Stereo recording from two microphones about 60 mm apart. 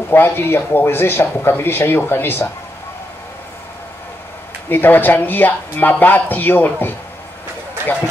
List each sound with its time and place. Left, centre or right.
0.1 s speech: left
4.6 s speech: left